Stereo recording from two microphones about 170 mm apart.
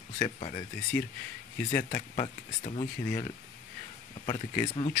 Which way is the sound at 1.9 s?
40° left (ahead or behind).